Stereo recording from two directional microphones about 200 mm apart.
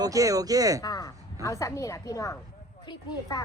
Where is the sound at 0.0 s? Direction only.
15° right (ahead or behind).